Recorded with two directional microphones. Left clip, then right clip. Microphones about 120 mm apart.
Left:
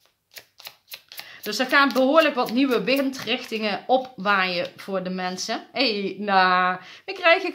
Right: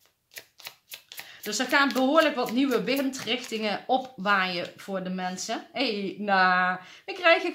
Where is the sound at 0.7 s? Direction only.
20° left (ahead or behind).